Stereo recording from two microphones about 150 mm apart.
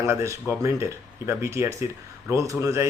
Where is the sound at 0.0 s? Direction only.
20° right (ahead or behind).